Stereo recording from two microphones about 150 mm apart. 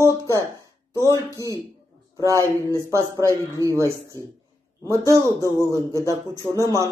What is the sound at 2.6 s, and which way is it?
Speech, 20° right (ahead or behind).